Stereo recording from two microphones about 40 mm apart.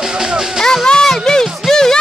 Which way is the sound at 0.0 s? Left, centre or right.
Centre.